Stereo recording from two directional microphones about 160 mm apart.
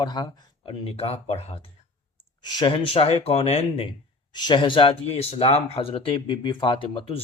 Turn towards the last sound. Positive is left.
turn(degrees=35)  # may be behind; listen again after turning